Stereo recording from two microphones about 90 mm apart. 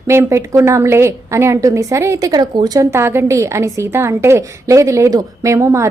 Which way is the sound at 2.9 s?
30° right (ahead or behind).